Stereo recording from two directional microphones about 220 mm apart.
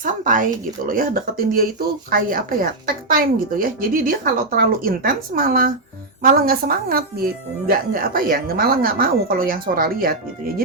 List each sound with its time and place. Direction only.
0.0 s a woman's voice: 35° right (ahead or behind)